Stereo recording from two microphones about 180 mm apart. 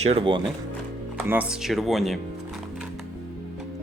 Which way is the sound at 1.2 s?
5° right (ahead or behind).